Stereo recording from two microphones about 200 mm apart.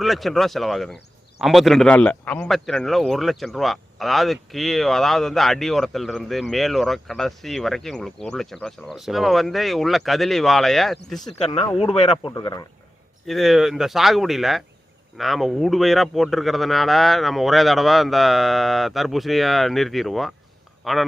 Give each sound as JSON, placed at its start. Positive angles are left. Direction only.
{"t": 0.0, "sound": "a man's voice", "side_deg": 0}
{"t": 11.8, "sound": "speech", "side_deg": 35}
{"t": 12.3, "sound": "speech", "side_deg": 20}
{"t": 13.2, "sound": "a man's voice", "side_deg": 0}